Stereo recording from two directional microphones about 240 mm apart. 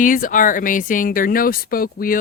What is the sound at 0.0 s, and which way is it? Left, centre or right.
Speech, left.